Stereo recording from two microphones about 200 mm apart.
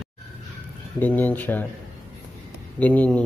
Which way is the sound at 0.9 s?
10° left (ahead or behind).